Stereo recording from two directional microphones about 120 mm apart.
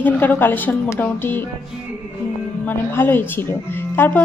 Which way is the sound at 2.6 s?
15° left (ahead or behind).